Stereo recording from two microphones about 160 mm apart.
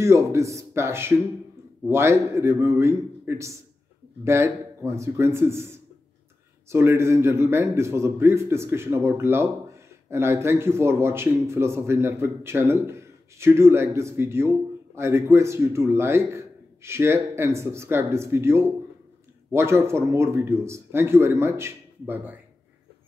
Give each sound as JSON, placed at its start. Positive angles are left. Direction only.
{"t": 0.0, "sound": "speech", "side_deg": -15}